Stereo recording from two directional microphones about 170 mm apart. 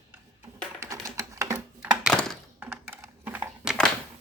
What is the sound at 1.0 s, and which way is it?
Typing, 20° right (ahead or behind).